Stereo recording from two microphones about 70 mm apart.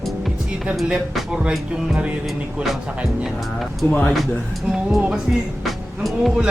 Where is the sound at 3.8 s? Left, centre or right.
Left.